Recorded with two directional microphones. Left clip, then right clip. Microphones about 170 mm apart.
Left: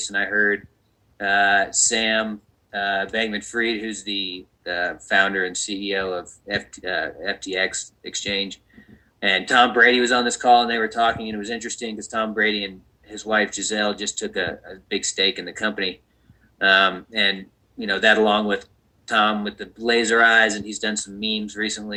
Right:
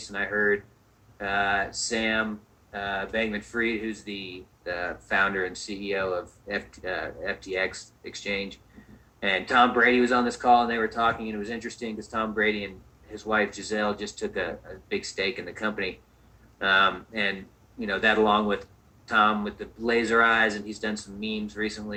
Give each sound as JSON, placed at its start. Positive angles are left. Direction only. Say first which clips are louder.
{"t": 0.2, "sound": "speech", "louder": "left 5 dB", "side_deg": 35}